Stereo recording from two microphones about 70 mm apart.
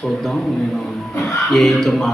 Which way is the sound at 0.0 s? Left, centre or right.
Centre.